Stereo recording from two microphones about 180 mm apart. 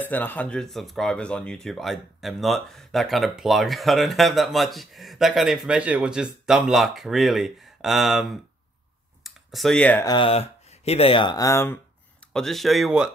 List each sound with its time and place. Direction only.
0.0 s speech: 10° left (ahead or behind)
9.2 s computer keyboard: centre (ahead or behind)
10.0 s speech: 30° left (ahead or behind)
12.3 s speech: 5° left (ahead or behind)